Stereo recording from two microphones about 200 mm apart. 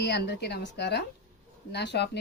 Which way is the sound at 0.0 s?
60° left (ahead or behind).